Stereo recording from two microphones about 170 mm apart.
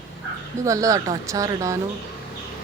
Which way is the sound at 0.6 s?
20° right (ahead or behind).